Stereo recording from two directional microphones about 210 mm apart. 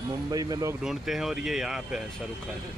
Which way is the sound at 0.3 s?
15° right (ahead or behind).